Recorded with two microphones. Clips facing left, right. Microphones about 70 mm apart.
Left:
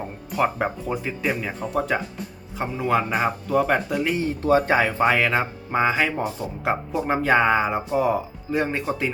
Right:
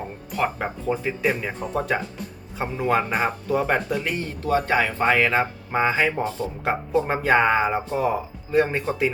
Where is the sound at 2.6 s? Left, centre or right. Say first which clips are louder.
Even; centre.